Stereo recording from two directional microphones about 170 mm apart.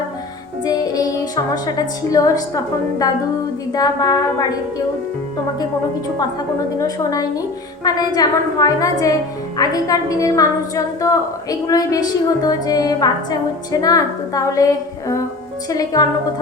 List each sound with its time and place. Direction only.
0.6 s music: 20° left (ahead or behind)
3.7 s a woman's voice: 20° left (ahead or behind)
6.7 s a woman's voice: 20° left (ahead or behind)